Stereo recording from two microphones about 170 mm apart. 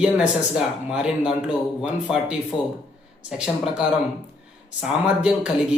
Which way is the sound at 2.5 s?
25° left (ahead or behind).